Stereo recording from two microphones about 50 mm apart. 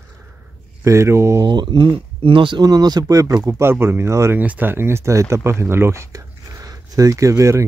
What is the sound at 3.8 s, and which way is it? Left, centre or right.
Speech, right.